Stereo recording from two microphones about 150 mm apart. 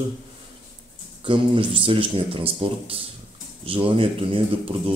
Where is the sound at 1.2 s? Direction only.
35° right (ahead or behind).